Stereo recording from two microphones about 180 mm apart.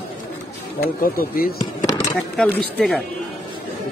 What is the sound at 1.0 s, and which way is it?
Speech, 55° left (ahead or behind).